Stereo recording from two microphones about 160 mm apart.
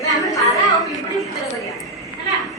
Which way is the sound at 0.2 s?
20° left (ahead or behind).